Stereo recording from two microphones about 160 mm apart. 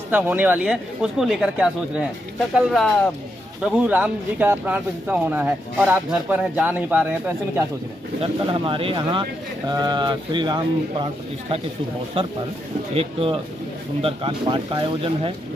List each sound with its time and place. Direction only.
0.1 s speech: 10° right (ahead or behind)
8.2 s speech: 30° right (ahead or behind)
12.2 s speech: 40° right (ahead or behind)